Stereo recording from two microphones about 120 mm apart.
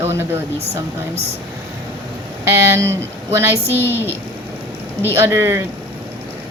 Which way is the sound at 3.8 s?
20° left (ahead or behind).